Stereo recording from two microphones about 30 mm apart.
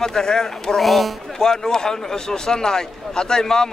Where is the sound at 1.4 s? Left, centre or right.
Left.